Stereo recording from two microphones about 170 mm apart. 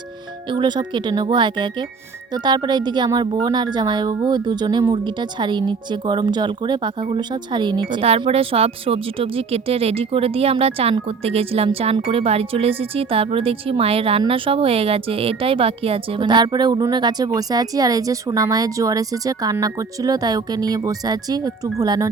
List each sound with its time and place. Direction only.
0.5 s a woman's voice: 25° right (ahead or behind)